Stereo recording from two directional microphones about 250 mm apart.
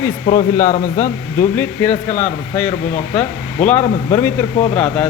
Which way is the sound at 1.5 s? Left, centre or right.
Centre.